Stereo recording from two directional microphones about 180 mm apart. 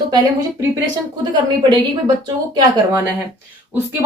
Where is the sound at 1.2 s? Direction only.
25° right (ahead or behind).